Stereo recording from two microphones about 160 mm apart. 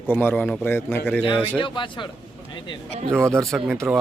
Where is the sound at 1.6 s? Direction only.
30° left (ahead or behind).